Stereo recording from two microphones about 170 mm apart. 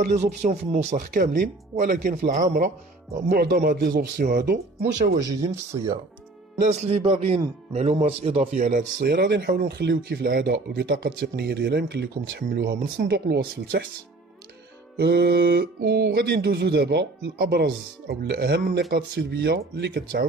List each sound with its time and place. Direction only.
0.0 s speech: 40° right (ahead or behind)
3.3 s speech: 65° right (ahead or behind)
5.2 s speech: 20° right (ahead or behind)
6.7 s speech: 35° right (ahead or behind)
9.0 s speech: 70° right (ahead or behind)
15.0 s speech: 70° right (ahead or behind)